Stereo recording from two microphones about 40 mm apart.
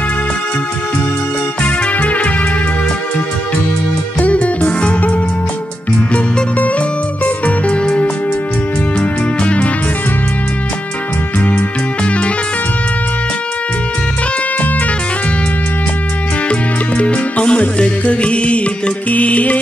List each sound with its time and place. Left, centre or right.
1.6 s music: left
4.2 s music: left
9.4 s music: left
11.3 s music: left
16.4 s music: left